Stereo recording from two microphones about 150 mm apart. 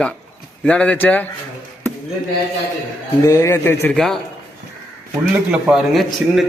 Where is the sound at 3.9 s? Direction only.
Centre (ahead or behind).